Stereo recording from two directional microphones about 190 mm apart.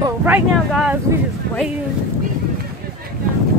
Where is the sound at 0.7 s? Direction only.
Centre (ahead or behind).